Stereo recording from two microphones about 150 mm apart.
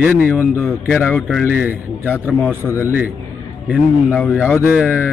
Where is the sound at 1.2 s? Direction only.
Centre (ahead or behind).